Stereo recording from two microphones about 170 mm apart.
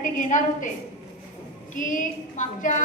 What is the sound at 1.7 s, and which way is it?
A woman's voice, 50° left (ahead or behind).